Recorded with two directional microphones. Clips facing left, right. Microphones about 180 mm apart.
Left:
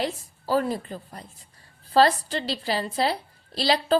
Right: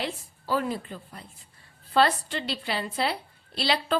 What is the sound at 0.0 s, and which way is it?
A woman's voice, 40° left (ahead or behind).